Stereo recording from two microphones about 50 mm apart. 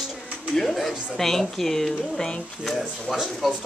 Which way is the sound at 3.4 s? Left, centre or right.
Centre.